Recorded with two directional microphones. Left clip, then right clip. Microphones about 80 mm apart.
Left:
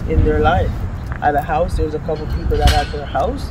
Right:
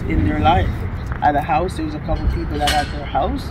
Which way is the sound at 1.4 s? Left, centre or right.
Left.